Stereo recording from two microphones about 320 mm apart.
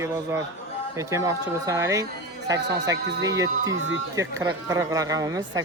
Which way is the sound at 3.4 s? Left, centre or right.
Right.